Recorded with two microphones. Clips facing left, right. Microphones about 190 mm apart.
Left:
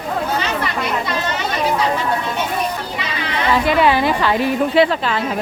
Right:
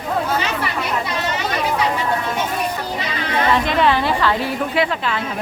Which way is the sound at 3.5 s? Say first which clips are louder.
Left 4 dB; 5° left (ahead or behind).